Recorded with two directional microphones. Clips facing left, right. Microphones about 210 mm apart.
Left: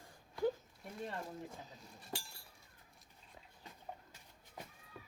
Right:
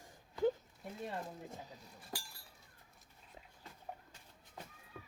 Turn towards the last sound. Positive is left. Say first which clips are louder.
# right 2 dB
turn(degrees=5)  # may be behind; listen again after turning